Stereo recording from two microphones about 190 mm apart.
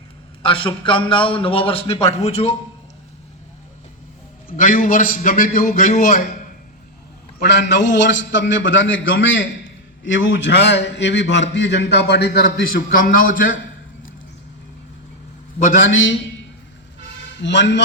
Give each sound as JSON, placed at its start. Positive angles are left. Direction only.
{"t": 0.4, "sound": "a man's voice", "side_deg": 25}
{"t": 4.5, "sound": "a man's voice", "side_deg": 45}
{"t": 7.3, "sound": "a man's voice", "side_deg": 65}
{"t": 15.8, "sound": "a man's voice", "side_deg": 85}
{"t": 17.4, "sound": "a man's voice", "side_deg": 70}